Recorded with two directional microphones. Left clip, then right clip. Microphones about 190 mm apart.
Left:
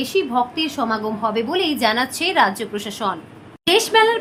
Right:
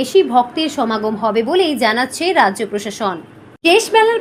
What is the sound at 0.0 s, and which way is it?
A woman's voice, 20° right (ahead or behind).